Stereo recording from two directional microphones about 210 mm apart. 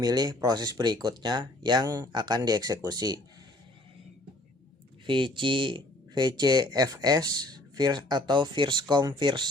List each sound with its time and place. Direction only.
0.0 s speech: 20° right (ahead or behind)
5.0 s speech: 25° right (ahead or behind)